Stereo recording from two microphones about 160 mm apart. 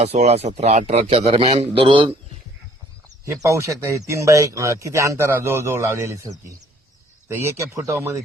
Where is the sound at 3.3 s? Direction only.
20° right (ahead or behind).